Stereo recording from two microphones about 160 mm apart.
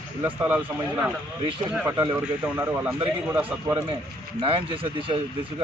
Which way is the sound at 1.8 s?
20° right (ahead or behind).